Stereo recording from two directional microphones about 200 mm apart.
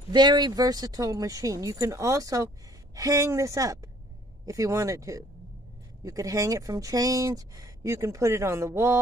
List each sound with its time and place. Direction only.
0.1 s speech: 20° right (ahead or behind)